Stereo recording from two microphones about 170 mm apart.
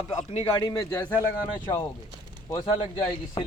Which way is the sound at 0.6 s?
20° left (ahead or behind).